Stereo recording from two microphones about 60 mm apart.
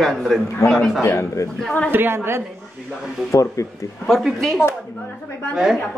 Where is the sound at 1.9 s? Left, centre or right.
Right.